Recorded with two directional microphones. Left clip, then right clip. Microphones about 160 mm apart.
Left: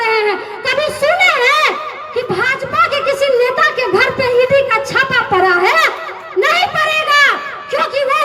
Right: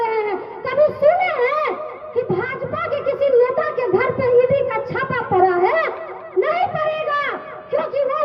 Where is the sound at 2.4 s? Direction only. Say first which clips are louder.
Left 10 dB; 45° right (ahead or behind).